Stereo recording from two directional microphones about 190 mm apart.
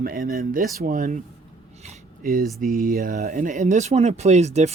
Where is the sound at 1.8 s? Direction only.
45° right (ahead or behind).